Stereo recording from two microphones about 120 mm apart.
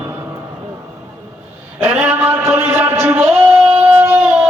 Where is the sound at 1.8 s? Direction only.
20° right (ahead or behind).